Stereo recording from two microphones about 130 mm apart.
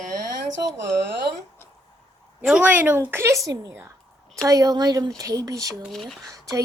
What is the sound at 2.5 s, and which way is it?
A woman's voice, 10° right (ahead or behind).